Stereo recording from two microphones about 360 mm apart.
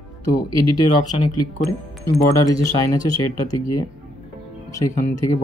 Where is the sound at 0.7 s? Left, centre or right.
Centre.